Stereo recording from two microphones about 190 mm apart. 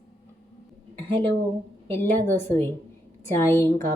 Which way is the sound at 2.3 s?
10° left (ahead or behind).